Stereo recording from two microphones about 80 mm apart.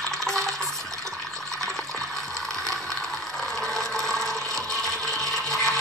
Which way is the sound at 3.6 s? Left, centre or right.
Centre.